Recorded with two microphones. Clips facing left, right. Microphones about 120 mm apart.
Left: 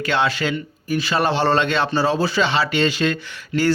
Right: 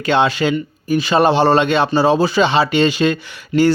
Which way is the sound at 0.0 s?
20° right (ahead or behind).